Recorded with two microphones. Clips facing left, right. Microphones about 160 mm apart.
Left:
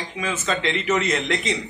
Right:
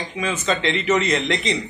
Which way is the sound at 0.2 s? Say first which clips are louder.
Right 2 dB; 5° left (ahead or behind).